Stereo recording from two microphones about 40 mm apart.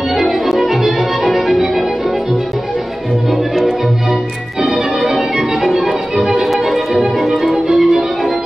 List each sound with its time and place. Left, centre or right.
0.1 s music: centre
4.6 s music: centre
6.1 s music: right
6.4 s music: centre